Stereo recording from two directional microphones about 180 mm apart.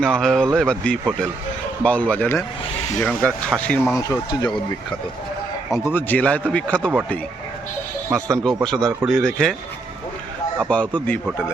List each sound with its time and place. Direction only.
0.0 s speech: 5° left (ahead or behind)
3.9 s speech: 20° left (ahead or behind)
5.7 s speech: 10° left (ahead or behind)
8.1 s speech: 5° left (ahead or behind)
10.6 s speech: 5° left (ahead or behind)